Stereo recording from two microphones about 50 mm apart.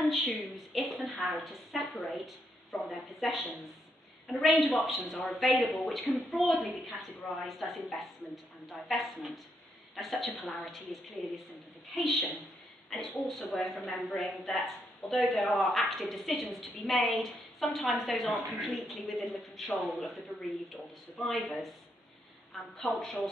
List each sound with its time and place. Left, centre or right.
0.0 s a sound: centre
1.4 s a man's voice: centre
13.4 s a woman's voice: centre